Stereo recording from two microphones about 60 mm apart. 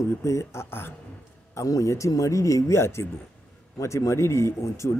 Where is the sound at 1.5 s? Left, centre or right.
Left.